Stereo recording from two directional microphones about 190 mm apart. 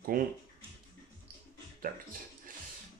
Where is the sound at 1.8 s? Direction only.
45° right (ahead or behind).